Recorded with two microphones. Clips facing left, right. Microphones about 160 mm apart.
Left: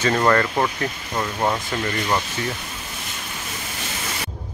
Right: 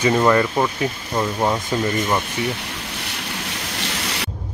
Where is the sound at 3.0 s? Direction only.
75° right (ahead or behind).